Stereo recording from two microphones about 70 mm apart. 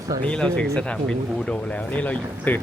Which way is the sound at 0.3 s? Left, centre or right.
Centre.